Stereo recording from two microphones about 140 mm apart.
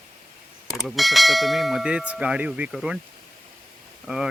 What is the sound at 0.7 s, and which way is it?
Speech, centre (ahead or behind).